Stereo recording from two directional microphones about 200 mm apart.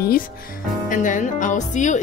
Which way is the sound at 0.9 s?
40° left (ahead or behind).